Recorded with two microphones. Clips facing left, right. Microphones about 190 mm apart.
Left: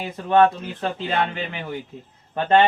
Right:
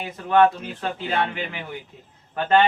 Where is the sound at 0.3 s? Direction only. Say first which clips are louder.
Left 1 dB; 25° left (ahead or behind).